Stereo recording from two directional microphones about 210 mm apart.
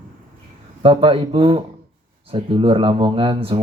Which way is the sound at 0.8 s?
25° right (ahead or behind).